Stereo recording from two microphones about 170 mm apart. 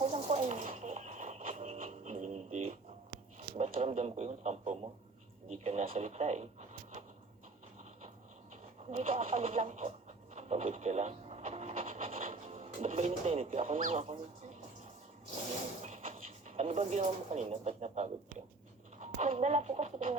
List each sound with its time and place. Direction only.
0.0 s a sound: 40° right (ahead or behind)
8.9 s speech: 40° right (ahead or behind)
10.3 s television: 40° right (ahead or behind)
12.2 s speech: 45° right (ahead or behind)
15.8 s speech: 40° right (ahead or behind)